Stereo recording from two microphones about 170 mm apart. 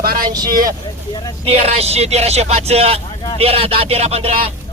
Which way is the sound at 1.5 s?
35° right (ahead or behind).